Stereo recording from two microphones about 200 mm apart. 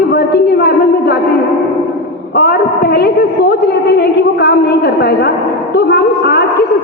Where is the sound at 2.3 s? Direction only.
55° left (ahead or behind).